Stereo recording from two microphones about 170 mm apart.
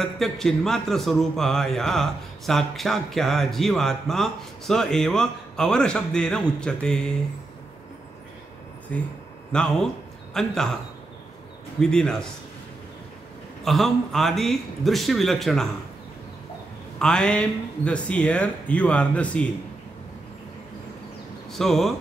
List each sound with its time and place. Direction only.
0.0 s a man's voice: centre (ahead or behind)
8.9 s a man's voice: 10° left (ahead or behind)
11.8 s a man's voice: 5° left (ahead or behind)
13.7 s a man's voice: centre (ahead or behind)
17.0 s speech: 5° left (ahead or behind)
21.5 s speech: centre (ahead or behind)